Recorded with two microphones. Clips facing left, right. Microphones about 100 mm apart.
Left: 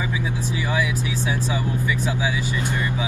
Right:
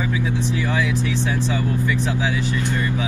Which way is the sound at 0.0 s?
15° left (ahead or behind).